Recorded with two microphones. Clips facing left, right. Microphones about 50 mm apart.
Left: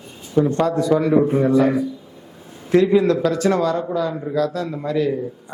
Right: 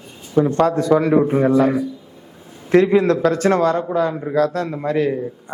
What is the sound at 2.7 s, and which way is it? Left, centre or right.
A man's voice, right.